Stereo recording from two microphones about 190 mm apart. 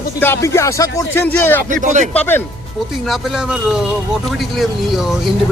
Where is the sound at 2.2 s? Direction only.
10° left (ahead or behind).